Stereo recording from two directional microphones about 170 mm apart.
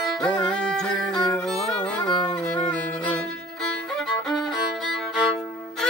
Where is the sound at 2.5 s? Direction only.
5° left (ahead or behind).